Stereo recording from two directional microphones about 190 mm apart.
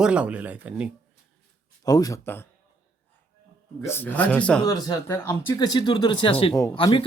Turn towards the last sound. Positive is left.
turn(degrees=25)  # may be behind; listen again after turning